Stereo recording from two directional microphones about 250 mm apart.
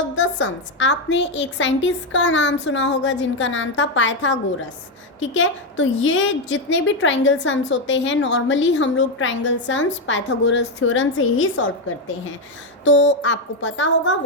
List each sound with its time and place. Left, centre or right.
0.2 s a woman's voice: left